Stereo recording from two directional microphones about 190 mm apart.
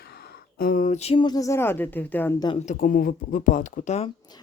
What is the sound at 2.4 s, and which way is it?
Speech, 35° left (ahead or behind).